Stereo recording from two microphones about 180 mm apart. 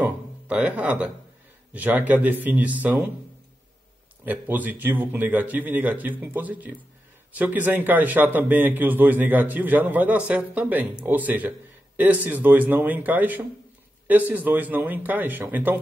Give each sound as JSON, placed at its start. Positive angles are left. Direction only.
{"t": 0.0, "sound": "music", "side_deg": -10}
{"t": 1.7, "sound": "a man's voice", "side_deg": -10}
{"t": 4.2, "sound": "a man's voice", "side_deg": -10}